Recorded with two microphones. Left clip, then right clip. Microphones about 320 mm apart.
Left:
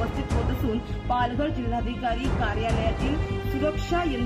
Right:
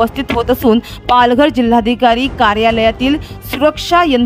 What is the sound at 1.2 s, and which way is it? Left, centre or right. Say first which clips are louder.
Speech: right 19 dB; right.